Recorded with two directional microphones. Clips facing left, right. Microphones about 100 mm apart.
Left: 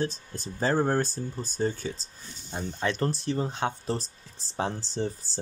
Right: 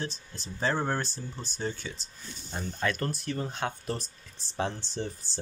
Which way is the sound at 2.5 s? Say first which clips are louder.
Left 1 dB; 25° left (ahead or behind).